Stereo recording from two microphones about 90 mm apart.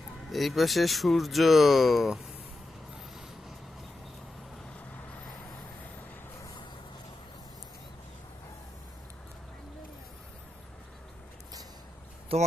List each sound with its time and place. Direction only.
0.3 s speech: centre (ahead or behind)
12.3 s speech: 90° right